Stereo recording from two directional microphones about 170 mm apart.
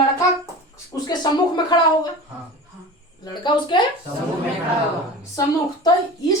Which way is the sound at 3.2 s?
25° left (ahead or behind).